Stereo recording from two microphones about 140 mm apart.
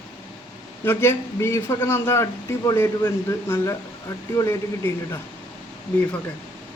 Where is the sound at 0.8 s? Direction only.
15° left (ahead or behind).